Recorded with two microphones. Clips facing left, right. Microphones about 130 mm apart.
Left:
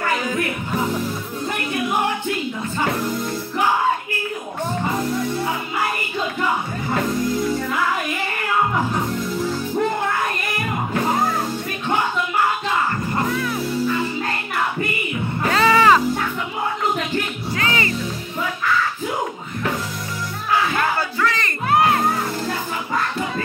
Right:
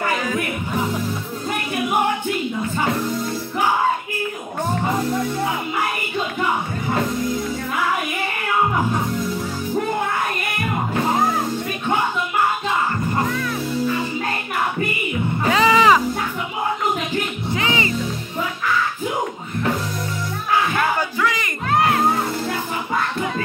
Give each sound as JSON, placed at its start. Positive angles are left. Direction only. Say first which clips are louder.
{"t": 15.5, "sound": "music", "louder": "even", "side_deg": -15}
{"t": 17.5, "sound": "music", "louder": "right 1 dB", "side_deg": -20}
{"t": 21.2, "sound": "crowd", "louder": "even", "side_deg": -15}
{"t": 21.6, "sound": "music", "louder": "left 1 dB", "side_deg": 5}